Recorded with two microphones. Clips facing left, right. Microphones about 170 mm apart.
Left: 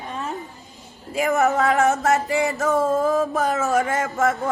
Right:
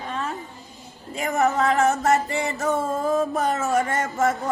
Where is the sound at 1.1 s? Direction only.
Centre (ahead or behind).